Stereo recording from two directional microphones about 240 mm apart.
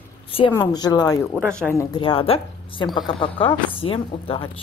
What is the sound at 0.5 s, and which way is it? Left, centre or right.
Speech, centre.